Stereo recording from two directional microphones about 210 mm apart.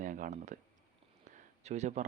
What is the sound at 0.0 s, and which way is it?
Speech, 40° right (ahead or behind).